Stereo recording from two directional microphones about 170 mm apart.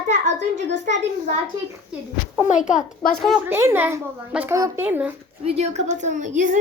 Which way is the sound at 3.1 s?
Centre (ahead or behind).